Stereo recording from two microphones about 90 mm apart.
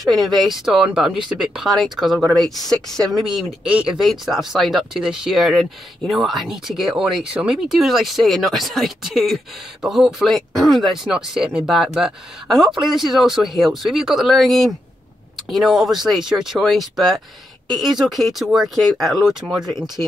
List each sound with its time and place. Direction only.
0.0 s speech: centre (ahead or behind)
2.2 s speech: 45° right (ahead or behind)
2.6 s speech: 5° left (ahead or behind)
20.0 s speech: 25° left (ahead or behind)